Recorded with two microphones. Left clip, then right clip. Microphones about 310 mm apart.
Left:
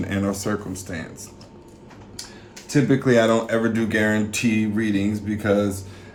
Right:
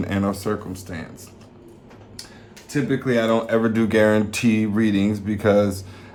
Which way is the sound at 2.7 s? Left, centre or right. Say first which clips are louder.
Left 3 dB; centre.